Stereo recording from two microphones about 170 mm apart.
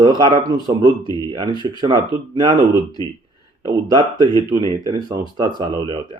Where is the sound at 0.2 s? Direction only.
25° right (ahead or behind).